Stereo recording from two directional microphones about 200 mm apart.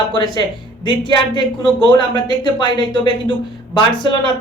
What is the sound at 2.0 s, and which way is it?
A woman's voice, 20° left (ahead or behind).